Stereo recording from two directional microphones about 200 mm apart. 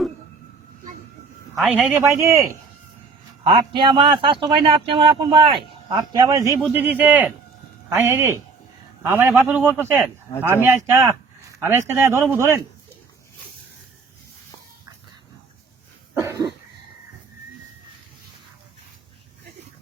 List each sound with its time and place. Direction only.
1.5 s speech: 5° right (ahead or behind)
3.4 s a man's voice: 25° right (ahead or behind)
16.1 s cough: 15° right (ahead or behind)